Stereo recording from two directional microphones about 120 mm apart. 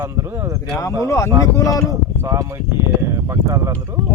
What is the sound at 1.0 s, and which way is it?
Speech, 25° left (ahead or behind).